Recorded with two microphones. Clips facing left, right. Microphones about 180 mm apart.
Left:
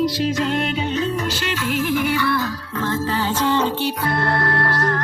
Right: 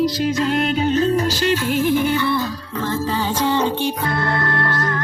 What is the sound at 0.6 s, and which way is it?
Music, 40° right (ahead or behind).